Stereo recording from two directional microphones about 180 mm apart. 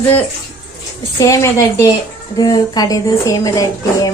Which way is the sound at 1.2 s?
15° left (ahead or behind).